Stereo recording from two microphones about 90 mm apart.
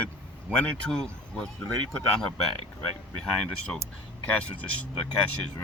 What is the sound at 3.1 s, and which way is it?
Speech, 10° left (ahead or behind).